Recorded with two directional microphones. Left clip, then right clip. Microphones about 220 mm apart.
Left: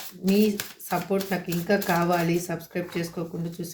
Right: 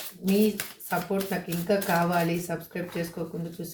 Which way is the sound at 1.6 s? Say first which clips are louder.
Left 1 dB; 40° left (ahead or behind).